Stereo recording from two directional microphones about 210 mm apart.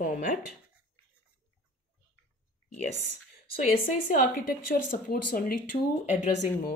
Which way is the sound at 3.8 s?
40° left (ahead or behind).